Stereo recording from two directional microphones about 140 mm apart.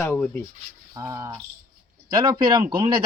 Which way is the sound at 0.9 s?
25° right (ahead or behind).